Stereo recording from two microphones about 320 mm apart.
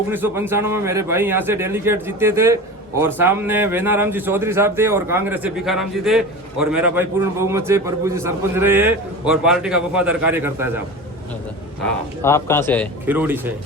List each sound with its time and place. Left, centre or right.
0.1 s a man's voice: centre
11.8 s a man's voice: centre
13.1 s a man's voice: centre